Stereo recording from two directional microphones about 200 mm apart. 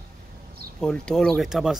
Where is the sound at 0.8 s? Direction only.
5° left (ahead or behind).